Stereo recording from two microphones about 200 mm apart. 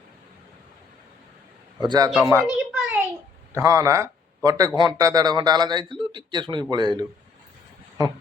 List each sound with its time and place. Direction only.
1.8 s a man's voice: 20° right (ahead or behind)
2.7 s a sound: 5° right (ahead or behind)
3.5 s a man's voice: 15° right (ahead or behind)